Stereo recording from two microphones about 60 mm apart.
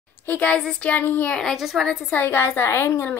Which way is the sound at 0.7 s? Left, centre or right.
Left.